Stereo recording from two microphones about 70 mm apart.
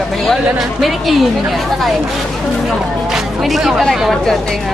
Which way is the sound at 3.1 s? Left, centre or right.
Centre.